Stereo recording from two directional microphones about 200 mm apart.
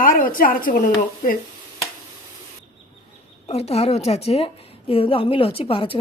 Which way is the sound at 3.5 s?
30° left (ahead or behind).